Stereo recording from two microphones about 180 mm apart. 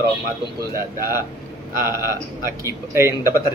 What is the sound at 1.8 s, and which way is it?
Speech, 15° right (ahead or behind).